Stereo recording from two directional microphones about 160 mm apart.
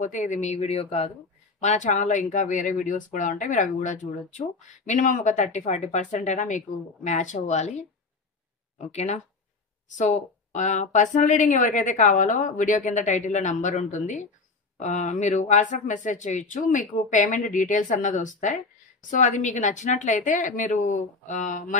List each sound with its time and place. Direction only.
0.0 s speech: 50° left (ahead or behind)